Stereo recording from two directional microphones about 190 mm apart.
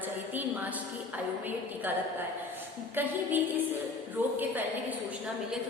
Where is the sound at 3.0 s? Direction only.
10° right (ahead or behind).